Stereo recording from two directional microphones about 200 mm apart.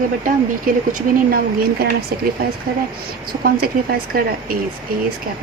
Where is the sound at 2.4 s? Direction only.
50° right (ahead or behind).